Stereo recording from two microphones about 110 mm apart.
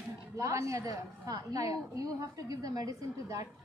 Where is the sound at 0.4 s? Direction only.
30° right (ahead or behind).